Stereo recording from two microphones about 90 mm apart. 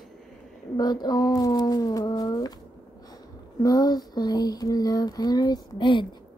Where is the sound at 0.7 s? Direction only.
50° left (ahead or behind).